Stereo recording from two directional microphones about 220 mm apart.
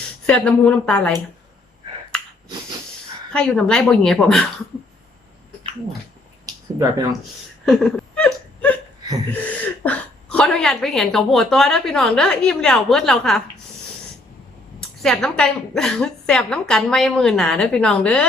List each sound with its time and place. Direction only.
0.3 s a woman's voice: 5° left (ahead or behind)
2.1 s finger snapping: 5° left (ahead or behind)
3.3 s a woman's voice: 5° left (ahead or behind)
6.4 s speech: 15° right (ahead or behind)
7.6 s whimper: centre (ahead or behind)
9.8 s a woman's voice: 5° left (ahead or behind)
14.8 s a woman's voice: centre (ahead or behind)